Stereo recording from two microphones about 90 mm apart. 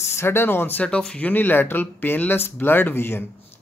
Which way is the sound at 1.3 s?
20° left (ahead or behind).